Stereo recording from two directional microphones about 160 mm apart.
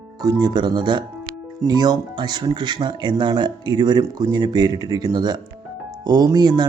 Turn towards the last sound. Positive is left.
turn(degrees=-25)  # may be behind; listen again after turning